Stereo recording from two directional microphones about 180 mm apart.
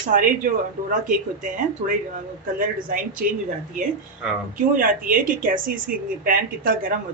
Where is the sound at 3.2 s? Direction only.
55° right (ahead or behind).